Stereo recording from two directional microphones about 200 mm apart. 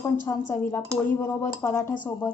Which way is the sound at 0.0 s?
15° left (ahead or behind).